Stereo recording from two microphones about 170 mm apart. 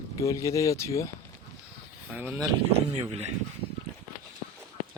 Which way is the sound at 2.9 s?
35° right (ahead or behind).